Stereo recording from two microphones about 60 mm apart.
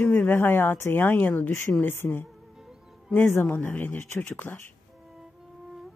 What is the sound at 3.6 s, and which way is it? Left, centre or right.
Speech, left.